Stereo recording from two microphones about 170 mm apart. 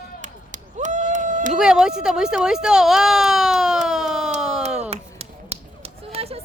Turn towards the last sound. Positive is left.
turn(degrees=-35)  # may be behind; listen again after turning